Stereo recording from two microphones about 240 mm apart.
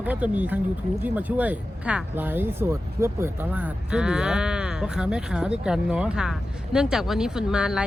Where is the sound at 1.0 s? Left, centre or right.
Centre.